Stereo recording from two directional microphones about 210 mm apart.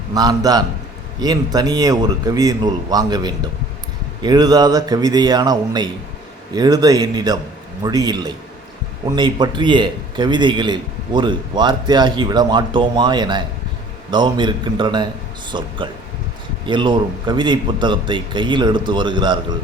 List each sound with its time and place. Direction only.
0.1 s a man's voice: 20° right (ahead or behind)